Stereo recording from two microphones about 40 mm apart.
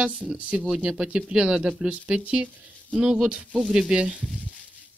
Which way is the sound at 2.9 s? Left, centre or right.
Centre.